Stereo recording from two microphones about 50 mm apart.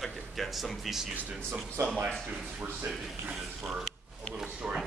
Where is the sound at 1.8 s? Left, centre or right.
Right.